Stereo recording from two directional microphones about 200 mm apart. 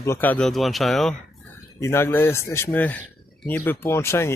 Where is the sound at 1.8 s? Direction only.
10° left (ahead or behind).